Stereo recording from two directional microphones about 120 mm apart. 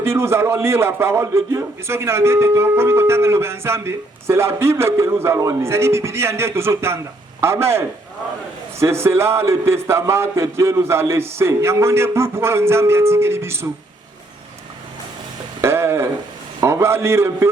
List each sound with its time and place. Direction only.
0.0 s a man's voice: 20° right (ahead or behind)
15.6 s a man's voice: 20° right (ahead or behind)